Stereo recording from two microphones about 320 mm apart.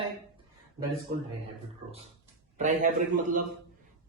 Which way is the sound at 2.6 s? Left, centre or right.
Right.